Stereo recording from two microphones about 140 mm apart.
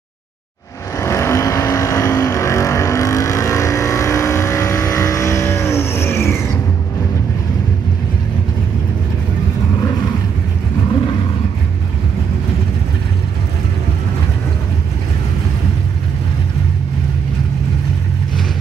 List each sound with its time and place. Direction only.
0.9 s vehicle: 20° left (ahead or behind)